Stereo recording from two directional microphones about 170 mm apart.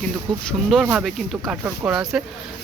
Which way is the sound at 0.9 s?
Centre (ahead or behind).